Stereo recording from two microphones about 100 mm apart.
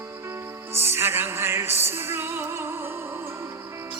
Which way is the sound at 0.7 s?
25° right (ahead or behind).